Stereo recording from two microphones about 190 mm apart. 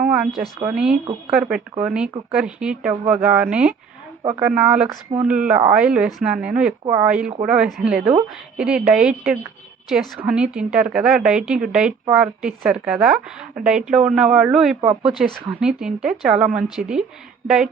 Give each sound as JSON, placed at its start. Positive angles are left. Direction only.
{"t": 0.1, "sound": "a woman's voice", "side_deg": 0}